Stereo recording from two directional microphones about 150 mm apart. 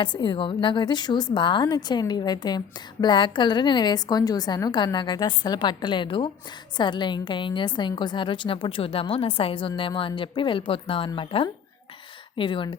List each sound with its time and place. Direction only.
0.0 s a woman's voice: 30° left (ahead or behind)